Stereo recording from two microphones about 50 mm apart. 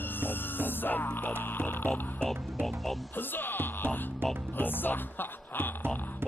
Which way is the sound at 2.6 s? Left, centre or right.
Centre.